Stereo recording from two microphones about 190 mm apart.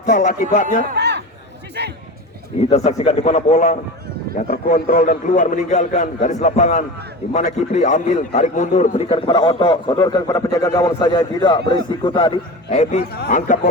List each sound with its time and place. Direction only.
0.0 s speech: 45° left (ahead or behind)
0.9 s a sound: 60° right (ahead or behind)
1.8 s speech: 60° right (ahead or behind)
2.6 s a man's voice: 35° left (ahead or behind)
13.0 s speech: 55° left (ahead or behind)